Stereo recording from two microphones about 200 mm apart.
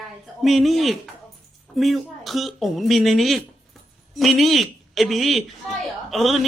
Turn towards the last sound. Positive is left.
turn(degrees=0)  # may be behind; listen again after turning